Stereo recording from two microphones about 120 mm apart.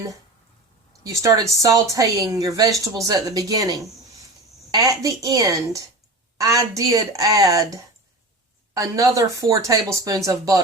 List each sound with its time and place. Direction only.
1.0 s a woman's voice: 30° right (ahead or behind)